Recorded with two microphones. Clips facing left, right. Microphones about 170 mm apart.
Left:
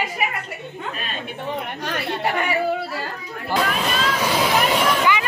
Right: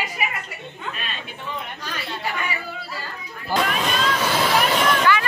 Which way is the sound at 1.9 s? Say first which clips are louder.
Left 6 dB; 60° left (ahead or behind).